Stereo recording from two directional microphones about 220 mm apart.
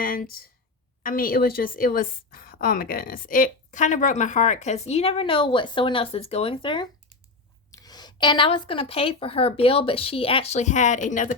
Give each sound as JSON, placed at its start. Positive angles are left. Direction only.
{"t": 0.0, "sound": "a woman's voice", "side_deg": 40}